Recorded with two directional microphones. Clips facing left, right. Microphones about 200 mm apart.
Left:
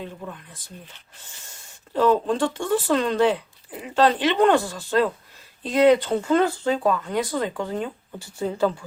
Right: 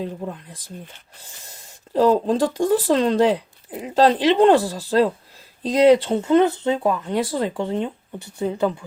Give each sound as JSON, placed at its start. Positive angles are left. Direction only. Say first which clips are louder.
{"t": 0.0, "sound": "speech", "louder": "right 6 dB", "side_deg": -30}